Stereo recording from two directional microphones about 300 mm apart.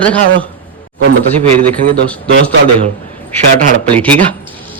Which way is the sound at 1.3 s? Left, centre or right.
Centre.